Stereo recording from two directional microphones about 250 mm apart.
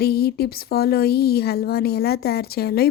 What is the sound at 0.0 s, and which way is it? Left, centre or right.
Speech, left.